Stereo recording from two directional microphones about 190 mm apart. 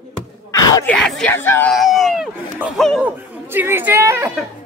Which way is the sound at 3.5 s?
10° right (ahead or behind).